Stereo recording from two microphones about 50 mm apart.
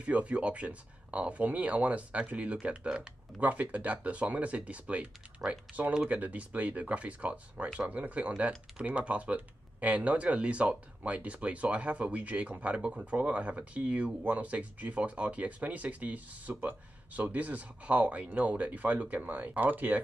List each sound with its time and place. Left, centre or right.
0.0 s speech: right
3.3 s speech: right